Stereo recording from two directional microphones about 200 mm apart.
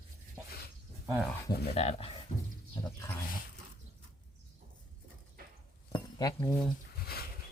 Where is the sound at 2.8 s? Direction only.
10° left (ahead or behind).